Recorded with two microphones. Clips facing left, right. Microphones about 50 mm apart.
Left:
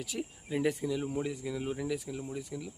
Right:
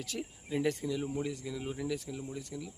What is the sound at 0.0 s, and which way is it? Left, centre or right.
Speech, centre.